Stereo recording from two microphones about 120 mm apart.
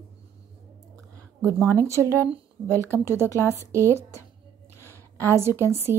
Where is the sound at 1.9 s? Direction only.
25° right (ahead or behind).